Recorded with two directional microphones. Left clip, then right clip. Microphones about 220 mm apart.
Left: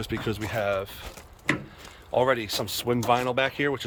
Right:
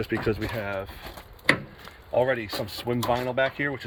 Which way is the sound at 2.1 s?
15° left (ahead or behind).